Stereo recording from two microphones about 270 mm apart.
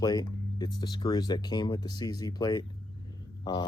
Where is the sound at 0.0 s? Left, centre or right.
Centre.